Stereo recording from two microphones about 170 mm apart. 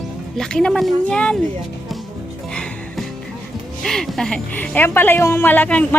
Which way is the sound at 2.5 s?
5° left (ahead or behind).